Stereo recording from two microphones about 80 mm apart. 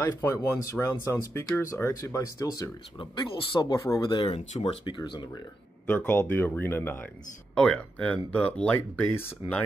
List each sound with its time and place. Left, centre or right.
0.0 s speech: left
3.0 s speech: left
5.9 s speech: left
7.5 s speech: centre